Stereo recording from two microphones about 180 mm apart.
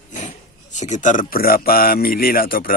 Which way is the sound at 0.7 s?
40° left (ahead or behind).